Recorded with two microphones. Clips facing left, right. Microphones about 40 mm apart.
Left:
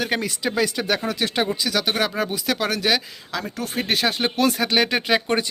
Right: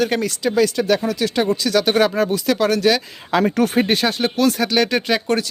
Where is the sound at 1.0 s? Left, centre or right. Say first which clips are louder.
Right 4 dB; left.